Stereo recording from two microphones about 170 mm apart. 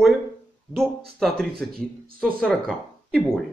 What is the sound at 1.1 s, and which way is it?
Speech, centre (ahead or behind).